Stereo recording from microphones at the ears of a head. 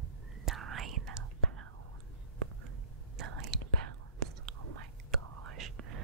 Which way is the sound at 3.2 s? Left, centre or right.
Right.